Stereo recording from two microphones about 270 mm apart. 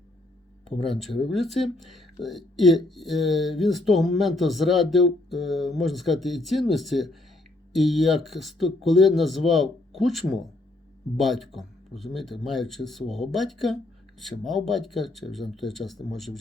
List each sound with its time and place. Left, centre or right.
0.9 s speech: centre